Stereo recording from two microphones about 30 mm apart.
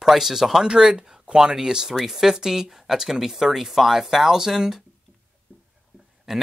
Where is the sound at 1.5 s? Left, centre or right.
Centre.